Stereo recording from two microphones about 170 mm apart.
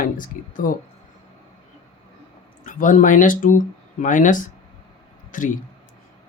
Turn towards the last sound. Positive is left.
turn(degrees=50)  # may be behind; listen again after turning